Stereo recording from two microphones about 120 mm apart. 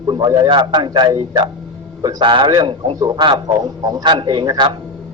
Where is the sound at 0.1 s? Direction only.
35° right (ahead or behind).